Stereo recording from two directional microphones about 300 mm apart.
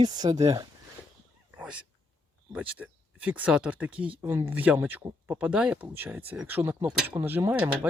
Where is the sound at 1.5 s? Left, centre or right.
Centre.